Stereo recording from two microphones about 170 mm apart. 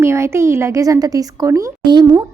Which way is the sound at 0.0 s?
15° right (ahead or behind).